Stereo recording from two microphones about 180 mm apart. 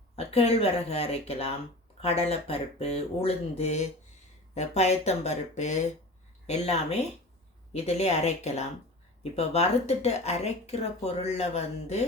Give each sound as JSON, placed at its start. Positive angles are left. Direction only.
{"t": 0.2, "sound": "speech", "side_deg": 35}